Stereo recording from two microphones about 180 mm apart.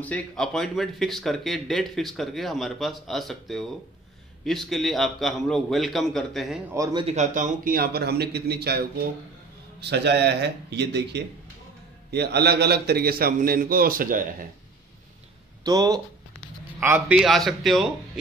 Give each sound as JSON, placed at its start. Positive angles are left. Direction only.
{"t": 0.0, "sound": "speech", "side_deg": 5}
{"t": 6.7, "sound": "speech", "side_deg": -20}
{"t": 7.1, "sound": "a man's voice", "side_deg": -40}
{"t": 15.6, "sound": "a man's voice", "side_deg": -20}
{"t": 17.2, "sound": "speech", "side_deg": 0}